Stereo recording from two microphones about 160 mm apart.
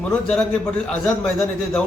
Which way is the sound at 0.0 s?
5° left (ahead or behind).